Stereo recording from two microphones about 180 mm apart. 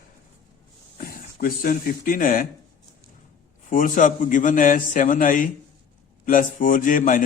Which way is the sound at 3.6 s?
45° left (ahead or behind).